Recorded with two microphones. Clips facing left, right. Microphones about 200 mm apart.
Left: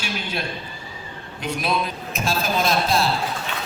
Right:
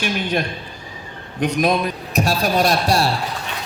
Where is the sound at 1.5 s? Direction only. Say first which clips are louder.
Right 5 dB; 45° right (ahead or behind).